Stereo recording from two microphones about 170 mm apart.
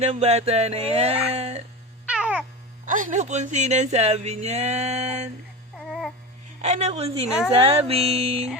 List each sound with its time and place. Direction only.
0.0 s speech: 40° right (ahead or behind)
2.0 s cat: 5° right (ahead or behind)
2.8 s speech: 50° right (ahead or behind)
5.7 s a sound: centre (ahead or behind)
6.6 s speech: 40° right (ahead or behind)